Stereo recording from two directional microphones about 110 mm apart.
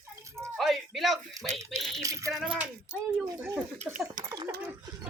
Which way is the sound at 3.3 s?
20° right (ahead or behind).